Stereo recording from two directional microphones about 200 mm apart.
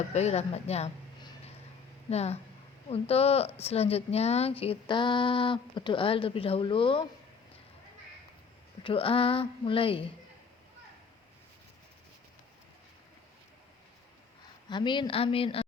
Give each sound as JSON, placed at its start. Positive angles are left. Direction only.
{"t": 0.1, "sound": "a woman's voice", "side_deg": 35}
{"t": 8.8, "sound": "a woman's voice", "side_deg": 25}
{"t": 14.7, "sound": "a woman's voice", "side_deg": 25}